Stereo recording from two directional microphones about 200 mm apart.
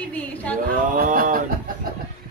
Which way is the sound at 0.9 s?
45° right (ahead or behind).